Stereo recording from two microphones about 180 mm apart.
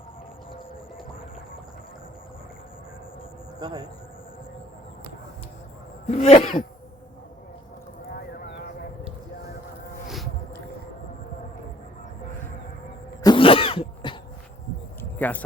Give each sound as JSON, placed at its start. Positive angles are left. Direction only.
{"t": 3.6, "sound": "speech", "side_deg": -20}
{"t": 6.1, "sound": "cough", "side_deg": 35}
{"t": 8.1, "sound": "a sound", "side_deg": 65}
{"t": 13.2, "sound": "throat clearing", "side_deg": 30}
{"t": 15.2, "sound": "speech", "side_deg": 10}